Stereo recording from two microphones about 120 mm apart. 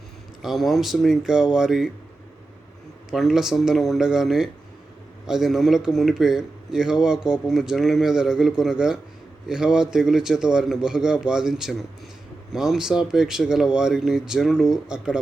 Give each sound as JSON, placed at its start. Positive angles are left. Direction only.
{"t": 0.4, "sound": "a man's voice", "side_deg": 0}
{"t": 3.1, "sound": "a man's voice", "side_deg": -5}